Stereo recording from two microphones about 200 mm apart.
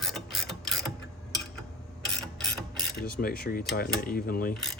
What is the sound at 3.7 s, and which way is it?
Speech, 50° left (ahead or behind).